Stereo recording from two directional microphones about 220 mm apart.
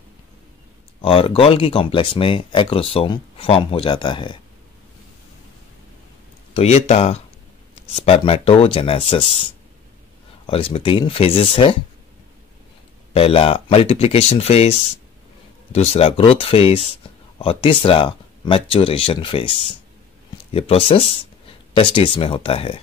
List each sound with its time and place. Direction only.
1.0 s speech: 25° left (ahead or behind)
6.5 s speech: 30° left (ahead or behind)
13.1 s speech: 25° left (ahead or behind)